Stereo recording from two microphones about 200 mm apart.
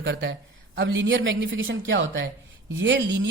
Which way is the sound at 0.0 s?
65° right (ahead or behind).